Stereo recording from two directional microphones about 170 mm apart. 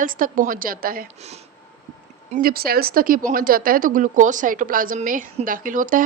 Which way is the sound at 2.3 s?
60° right (ahead or behind).